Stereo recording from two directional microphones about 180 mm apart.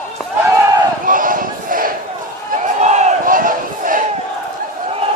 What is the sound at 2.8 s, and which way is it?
Battle cry, 45° right (ahead or behind).